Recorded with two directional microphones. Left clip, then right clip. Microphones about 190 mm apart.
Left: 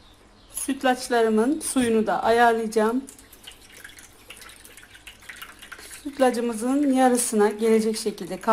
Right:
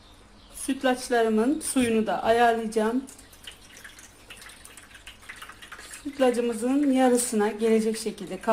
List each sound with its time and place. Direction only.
0.7 s a woman's voice: 15° left (ahead or behind)
6.1 s a woman's voice: 20° left (ahead or behind)